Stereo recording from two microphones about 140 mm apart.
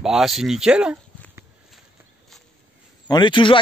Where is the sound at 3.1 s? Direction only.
30° left (ahead or behind).